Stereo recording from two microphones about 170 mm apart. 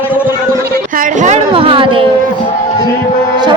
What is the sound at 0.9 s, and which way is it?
Speech, 50° right (ahead or behind).